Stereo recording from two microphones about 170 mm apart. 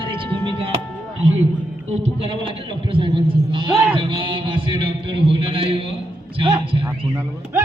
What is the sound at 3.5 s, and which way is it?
A man's voice, 30° right (ahead or behind).